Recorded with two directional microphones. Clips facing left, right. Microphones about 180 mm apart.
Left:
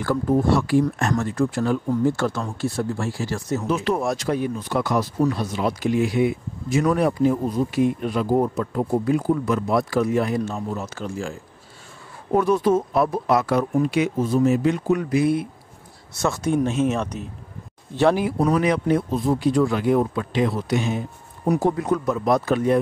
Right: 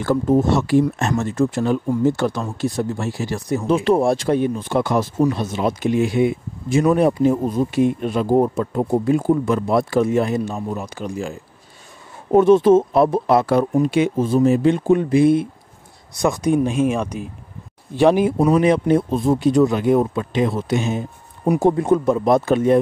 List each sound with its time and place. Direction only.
0.0 s speech: 25° right (ahead or behind)
3.6 s speech: 25° right (ahead or behind)
16.1 s speech: 15° right (ahead or behind)